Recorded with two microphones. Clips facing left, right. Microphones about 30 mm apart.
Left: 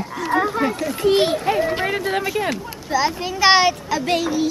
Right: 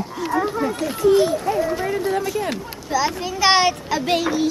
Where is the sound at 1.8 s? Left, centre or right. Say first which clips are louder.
Even; left.